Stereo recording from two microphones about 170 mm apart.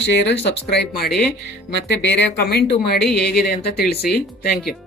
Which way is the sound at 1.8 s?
90° left.